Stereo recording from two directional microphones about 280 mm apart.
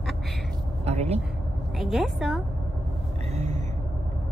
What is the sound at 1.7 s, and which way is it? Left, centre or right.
Speech, centre.